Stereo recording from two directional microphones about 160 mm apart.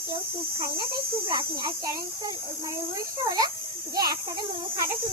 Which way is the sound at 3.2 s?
25° right (ahead or behind).